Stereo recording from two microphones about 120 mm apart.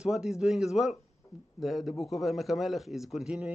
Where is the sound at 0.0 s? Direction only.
5° right (ahead or behind).